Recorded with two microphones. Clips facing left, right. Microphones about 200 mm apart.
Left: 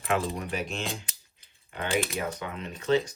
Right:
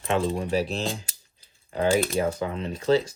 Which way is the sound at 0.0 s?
30° right (ahead or behind).